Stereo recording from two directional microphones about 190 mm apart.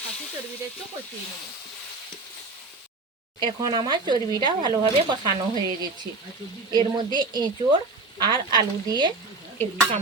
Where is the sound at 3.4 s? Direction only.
25° right (ahead or behind).